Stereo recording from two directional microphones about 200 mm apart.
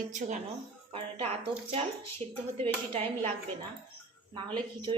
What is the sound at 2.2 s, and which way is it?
A woman's voice, 30° right (ahead or behind).